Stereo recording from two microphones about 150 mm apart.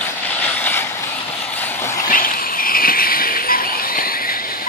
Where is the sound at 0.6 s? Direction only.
15° left (ahead or behind).